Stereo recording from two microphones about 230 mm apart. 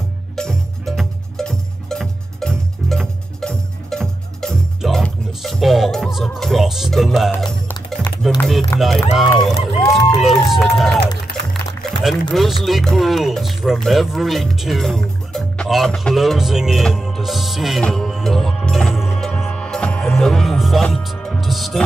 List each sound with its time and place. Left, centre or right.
0.4 s music: centre
8.4 s run: centre
8.7 s speech: centre
11.3 s music: left
12.0 s speech: centre
15.3 s music: centre